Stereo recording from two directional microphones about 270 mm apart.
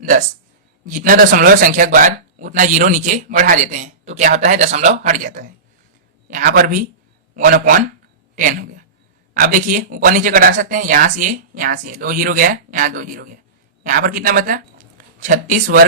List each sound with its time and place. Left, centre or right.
0.0 s speech: right